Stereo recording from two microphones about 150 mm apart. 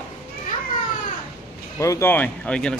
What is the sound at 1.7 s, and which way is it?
Speech, 20° left (ahead or behind).